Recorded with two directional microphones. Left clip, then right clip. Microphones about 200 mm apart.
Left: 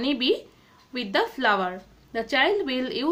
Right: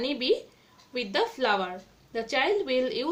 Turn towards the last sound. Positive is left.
turn(degrees=35)  # may be behind; listen again after turning